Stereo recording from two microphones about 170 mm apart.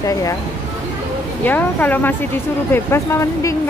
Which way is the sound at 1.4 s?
10° left (ahead or behind).